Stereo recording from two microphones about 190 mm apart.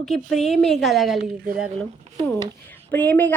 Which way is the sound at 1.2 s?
50° right (ahead or behind).